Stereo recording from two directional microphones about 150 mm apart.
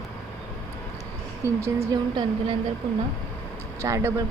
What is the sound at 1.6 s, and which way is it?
Speech, 25° right (ahead or behind).